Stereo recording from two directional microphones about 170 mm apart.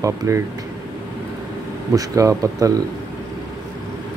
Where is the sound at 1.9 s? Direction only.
20° right (ahead or behind).